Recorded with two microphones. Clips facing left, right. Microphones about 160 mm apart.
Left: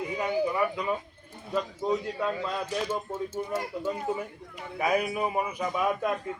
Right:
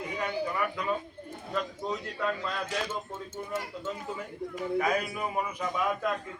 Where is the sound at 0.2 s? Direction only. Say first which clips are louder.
Left 4 dB; 20° left (ahead or behind).